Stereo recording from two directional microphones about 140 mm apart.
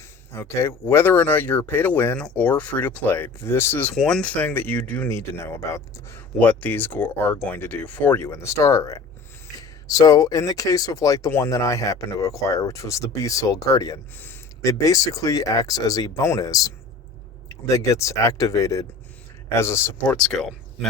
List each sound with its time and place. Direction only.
0.3 s speech: 20° left (ahead or behind)
20.1 s speech: 5° left (ahead or behind)